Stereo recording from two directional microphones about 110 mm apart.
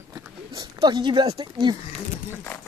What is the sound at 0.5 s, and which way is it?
Speech, 40° right (ahead or behind).